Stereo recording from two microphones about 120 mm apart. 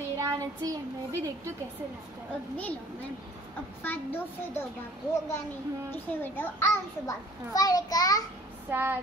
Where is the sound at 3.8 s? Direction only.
15° left (ahead or behind).